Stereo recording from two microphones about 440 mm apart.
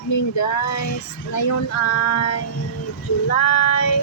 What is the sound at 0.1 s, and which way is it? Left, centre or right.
Speech, left.